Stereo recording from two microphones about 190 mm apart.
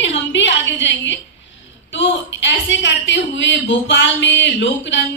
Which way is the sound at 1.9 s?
75° left (ahead or behind).